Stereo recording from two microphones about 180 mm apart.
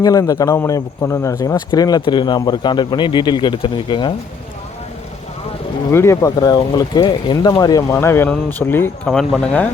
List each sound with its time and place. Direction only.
0.0 s a man's voice: 20° left (ahead or behind)
5.9 s speech: 15° left (ahead or behind)